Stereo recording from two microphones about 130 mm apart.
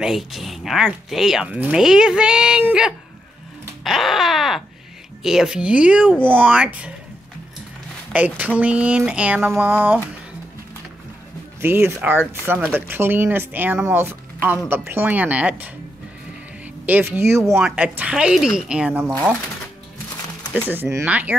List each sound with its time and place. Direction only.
0.0 s speech: centre (ahead or behind)
8.1 s speech: 10° right (ahead or behind)
11.6 s speech: 15° right (ahead or behind)
16.8 s speech: 15° right (ahead or behind)
20.6 s speech: 15° right (ahead or behind)